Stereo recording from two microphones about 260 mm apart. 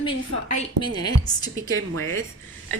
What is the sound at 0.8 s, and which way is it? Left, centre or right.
Speech, centre.